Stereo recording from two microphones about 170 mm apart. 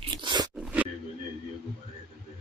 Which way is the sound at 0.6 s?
10° right (ahead or behind).